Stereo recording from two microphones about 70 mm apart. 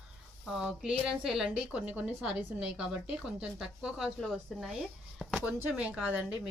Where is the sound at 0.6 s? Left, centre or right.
Centre.